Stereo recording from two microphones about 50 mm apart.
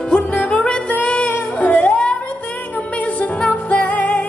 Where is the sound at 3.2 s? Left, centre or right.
Left.